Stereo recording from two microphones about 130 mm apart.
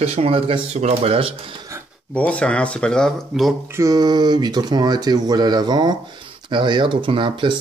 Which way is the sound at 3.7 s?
25° right (ahead or behind).